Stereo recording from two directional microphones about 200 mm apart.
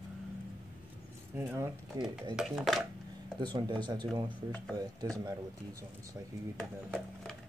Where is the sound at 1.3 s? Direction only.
10° right (ahead or behind).